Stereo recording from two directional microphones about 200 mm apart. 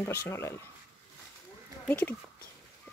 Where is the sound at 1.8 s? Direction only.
10° left (ahead or behind).